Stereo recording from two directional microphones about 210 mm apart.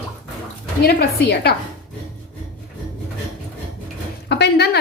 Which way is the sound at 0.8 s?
50° left (ahead or behind).